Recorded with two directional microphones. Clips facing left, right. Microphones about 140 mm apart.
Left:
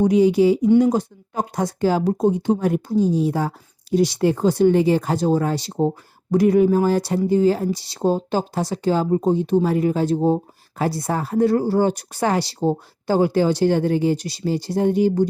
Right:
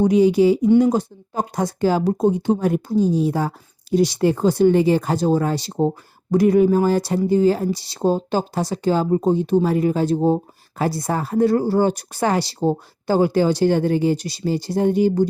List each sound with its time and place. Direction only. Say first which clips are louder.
0.0 s speech: right 1 dB; 30° right (ahead or behind)